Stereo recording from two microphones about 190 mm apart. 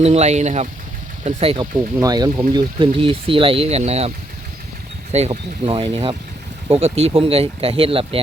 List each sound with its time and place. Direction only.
0.0 s speech: 35° right (ahead or behind)
2.0 s speech: 20° right (ahead or behind)
5.1 s speech: 35° right (ahead or behind)